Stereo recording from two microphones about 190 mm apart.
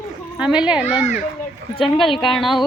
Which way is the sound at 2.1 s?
25° left (ahead or behind).